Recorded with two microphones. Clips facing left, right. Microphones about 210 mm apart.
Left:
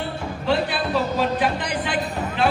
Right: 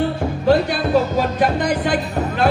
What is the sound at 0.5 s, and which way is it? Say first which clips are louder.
Music: right 6 dB; 45° right (ahead or behind).